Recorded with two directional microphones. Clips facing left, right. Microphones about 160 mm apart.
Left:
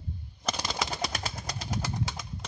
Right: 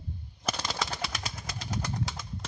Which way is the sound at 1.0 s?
40° left (ahead or behind).